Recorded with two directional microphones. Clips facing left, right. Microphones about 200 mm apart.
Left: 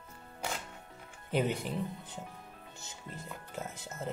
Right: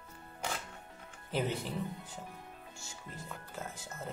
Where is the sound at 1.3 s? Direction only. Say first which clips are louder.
Left 3 dB; 15° left (ahead or behind).